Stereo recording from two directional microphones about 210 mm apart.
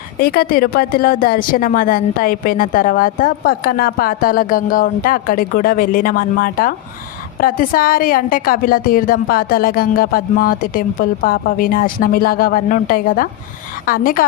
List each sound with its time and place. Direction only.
0.2 s a woman's voice: 45° left (ahead or behind)